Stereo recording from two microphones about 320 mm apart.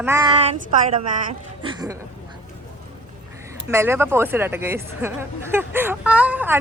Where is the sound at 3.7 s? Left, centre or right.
Centre.